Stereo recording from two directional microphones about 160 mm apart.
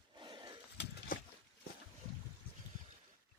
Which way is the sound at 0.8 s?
60° left (ahead or behind).